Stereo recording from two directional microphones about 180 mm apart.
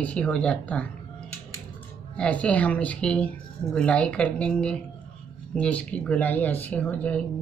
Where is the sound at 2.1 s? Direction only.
5° left (ahead or behind).